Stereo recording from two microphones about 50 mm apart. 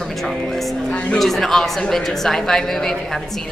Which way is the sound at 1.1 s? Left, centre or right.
Centre.